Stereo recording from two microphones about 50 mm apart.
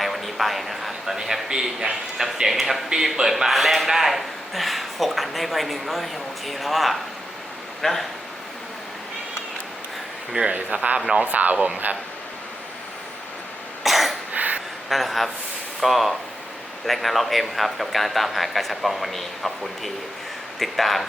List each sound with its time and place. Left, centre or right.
0.0 s a man's voice: centre
10.3 s speech: right
13.8 s cough: centre
14.3 s a sound: right
14.8 s a man's voice: centre